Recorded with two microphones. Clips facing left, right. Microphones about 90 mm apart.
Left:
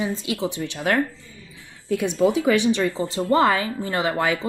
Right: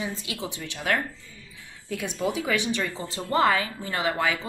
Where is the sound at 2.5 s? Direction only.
30° left (ahead or behind).